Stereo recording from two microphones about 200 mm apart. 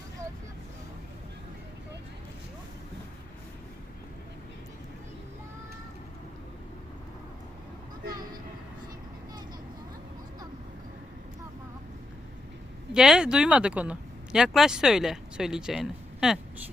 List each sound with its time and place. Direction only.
8.1 s vehicle: 20° right (ahead or behind)
12.9 s speech: 5° right (ahead or behind)